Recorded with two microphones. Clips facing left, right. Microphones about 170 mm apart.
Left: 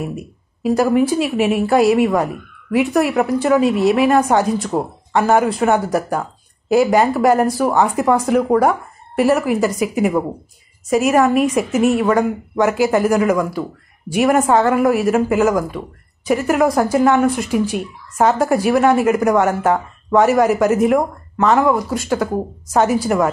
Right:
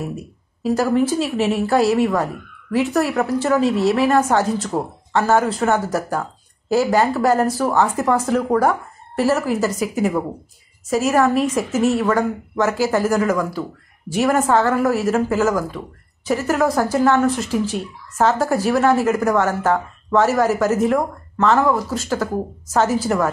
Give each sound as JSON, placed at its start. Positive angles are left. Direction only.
{"t": 0.0, "sound": "speech", "side_deg": 15}